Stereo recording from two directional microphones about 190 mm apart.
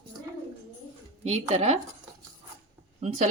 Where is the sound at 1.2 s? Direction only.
35° right (ahead or behind).